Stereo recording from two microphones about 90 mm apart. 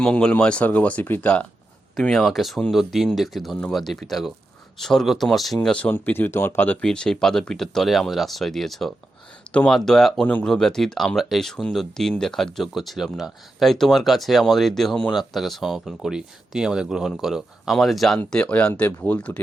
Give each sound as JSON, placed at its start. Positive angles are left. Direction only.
{"t": 0.0, "sound": "speech", "side_deg": 10}
{"t": 2.0, "sound": "speech", "side_deg": 0}
{"t": 5.6, "sound": "speech", "side_deg": 15}
{"t": 6.8, "sound": "speech", "side_deg": 10}
{"t": 9.7, "sound": "speech", "side_deg": 5}
{"t": 18.3, "sound": "speech", "side_deg": 10}
{"t": 18.7, "sound": "speech", "side_deg": 25}